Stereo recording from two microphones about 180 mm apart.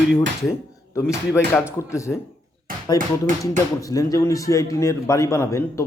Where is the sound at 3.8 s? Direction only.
20° left (ahead or behind).